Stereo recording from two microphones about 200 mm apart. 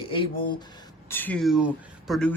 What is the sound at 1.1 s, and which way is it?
Speech, 10° left (ahead or behind).